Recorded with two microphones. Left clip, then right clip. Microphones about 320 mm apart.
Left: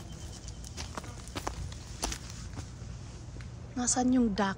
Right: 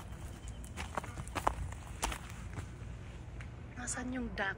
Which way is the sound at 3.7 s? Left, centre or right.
Centre.